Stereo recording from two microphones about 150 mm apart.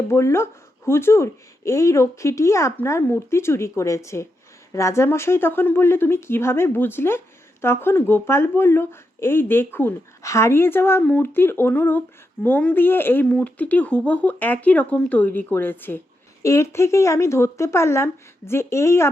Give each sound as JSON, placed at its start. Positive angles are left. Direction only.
{"t": 0.1, "sound": "speech", "side_deg": 20}